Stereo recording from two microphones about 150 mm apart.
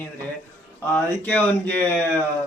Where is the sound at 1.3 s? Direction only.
10° left (ahead or behind).